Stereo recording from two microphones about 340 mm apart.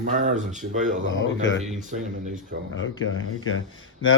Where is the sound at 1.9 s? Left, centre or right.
Right.